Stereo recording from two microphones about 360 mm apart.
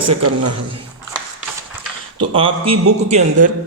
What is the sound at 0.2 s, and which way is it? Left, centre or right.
Speech, right.